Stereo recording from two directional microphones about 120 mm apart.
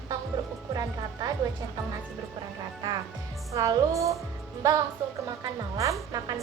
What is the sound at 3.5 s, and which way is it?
Music, 30° right (ahead or behind).